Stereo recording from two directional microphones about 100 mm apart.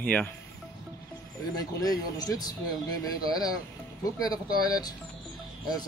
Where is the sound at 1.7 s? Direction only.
40° left (ahead or behind).